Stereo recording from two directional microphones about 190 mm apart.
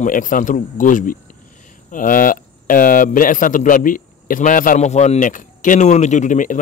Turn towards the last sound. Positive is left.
turn(degrees=40)  # may be behind; listen again after turning